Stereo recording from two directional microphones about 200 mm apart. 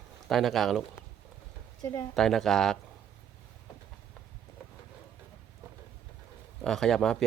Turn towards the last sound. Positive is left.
turn(degrees=5)  # may be behind; listen again after turning